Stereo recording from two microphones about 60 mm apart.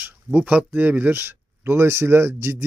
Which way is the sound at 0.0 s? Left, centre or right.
Right.